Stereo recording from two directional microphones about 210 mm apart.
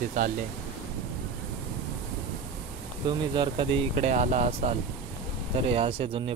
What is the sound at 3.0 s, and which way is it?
Speech, 20° right (ahead or behind).